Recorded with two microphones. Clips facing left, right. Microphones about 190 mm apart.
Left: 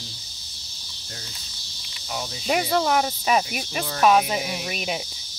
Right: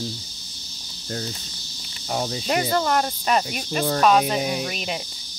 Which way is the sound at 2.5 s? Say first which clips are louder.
Left 1 dB; 5° left (ahead or behind).